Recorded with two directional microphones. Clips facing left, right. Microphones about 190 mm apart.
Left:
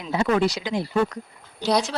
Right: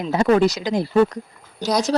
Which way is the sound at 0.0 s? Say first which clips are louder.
Right 5 dB; 40° right (ahead or behind).